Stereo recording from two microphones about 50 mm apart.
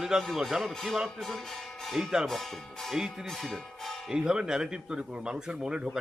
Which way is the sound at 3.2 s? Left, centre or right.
Centre.